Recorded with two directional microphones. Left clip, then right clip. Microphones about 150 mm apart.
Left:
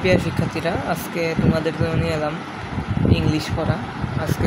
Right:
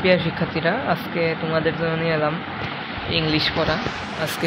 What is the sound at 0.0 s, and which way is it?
Speech, 15° left (ahead or behind).